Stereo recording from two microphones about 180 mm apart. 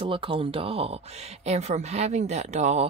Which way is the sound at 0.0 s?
30° right (ahead or behind).